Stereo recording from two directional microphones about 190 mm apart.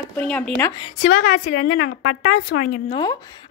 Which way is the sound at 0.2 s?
5° left (ahead or behind).